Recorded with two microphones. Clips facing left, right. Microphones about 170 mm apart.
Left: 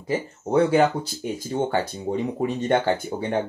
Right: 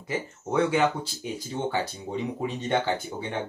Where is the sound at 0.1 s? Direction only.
35° left (ahead or behind).